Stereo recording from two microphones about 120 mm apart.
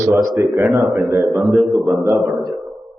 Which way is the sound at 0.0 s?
30° right (ahead or behind).